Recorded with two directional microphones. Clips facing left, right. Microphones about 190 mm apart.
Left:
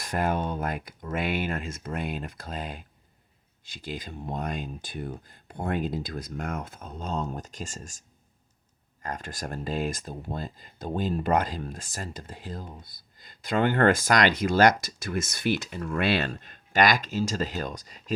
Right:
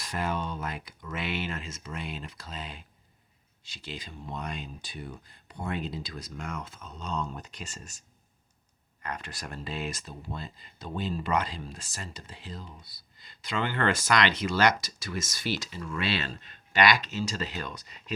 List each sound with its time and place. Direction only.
0.0 s speech: 50° left (ahead or behind)
9.0 s speech: 45° left (ahead or behind)